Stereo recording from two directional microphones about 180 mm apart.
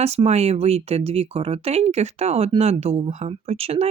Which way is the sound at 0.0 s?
35° right (ahead or behind).